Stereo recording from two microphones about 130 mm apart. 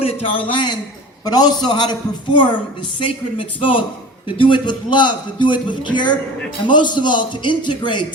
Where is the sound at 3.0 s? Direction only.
45° left (ahead or behind).